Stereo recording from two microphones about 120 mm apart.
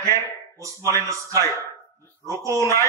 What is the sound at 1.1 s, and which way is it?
A man's voice, 25° right (ahead or behind).